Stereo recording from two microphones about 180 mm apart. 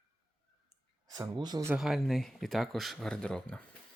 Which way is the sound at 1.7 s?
Centre (ahead or behind).